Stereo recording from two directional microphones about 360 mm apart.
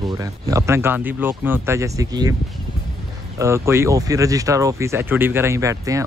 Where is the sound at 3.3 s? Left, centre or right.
Centre.